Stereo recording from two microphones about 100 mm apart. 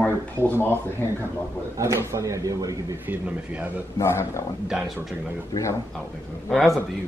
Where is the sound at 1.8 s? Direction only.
30° right (ahead or behind).